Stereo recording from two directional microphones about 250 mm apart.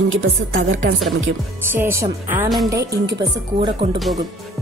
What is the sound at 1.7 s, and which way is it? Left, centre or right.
Speech, centre.